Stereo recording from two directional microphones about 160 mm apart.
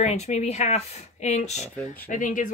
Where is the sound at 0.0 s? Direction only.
45° left (ahead or behind).